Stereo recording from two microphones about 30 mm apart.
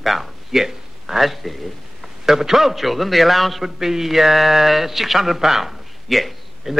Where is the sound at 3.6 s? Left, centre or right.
Centre.